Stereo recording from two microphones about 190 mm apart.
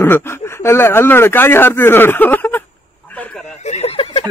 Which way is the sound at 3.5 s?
35° left (ahead or behind).